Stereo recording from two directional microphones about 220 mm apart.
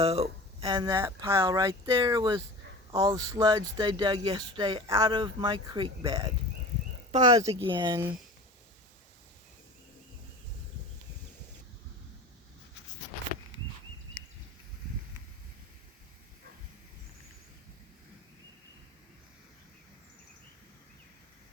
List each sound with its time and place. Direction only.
0.0 s speech: 25° right (ahead or behind)